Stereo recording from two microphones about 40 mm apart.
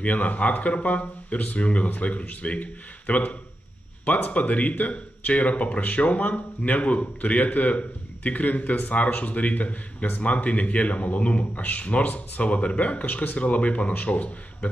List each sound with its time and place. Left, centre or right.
0.0 s speech: left
13.4 s speech: left